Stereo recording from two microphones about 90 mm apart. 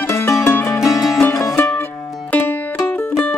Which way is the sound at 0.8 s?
Centre (ahead or behind).